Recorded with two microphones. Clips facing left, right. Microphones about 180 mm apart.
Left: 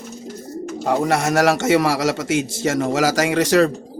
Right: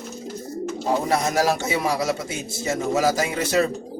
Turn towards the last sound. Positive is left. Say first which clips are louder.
# left 6 dB
turn(degrees=90)